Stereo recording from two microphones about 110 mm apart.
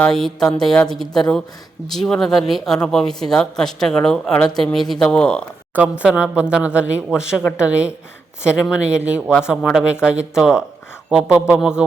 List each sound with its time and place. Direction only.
0.0 s speech: 5° left (ahead or behind)
5.7 s speech: 10° right (ahead or behind)
7.4 s speech: 25° left (ahead or behind)
8.6 s speech: 10° right (ahead or behind)